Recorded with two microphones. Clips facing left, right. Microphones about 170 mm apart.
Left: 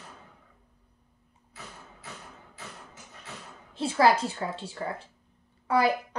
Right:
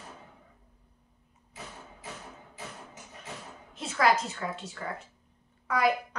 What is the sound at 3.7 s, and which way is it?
A woman's voice, 30° left (ahead or behind).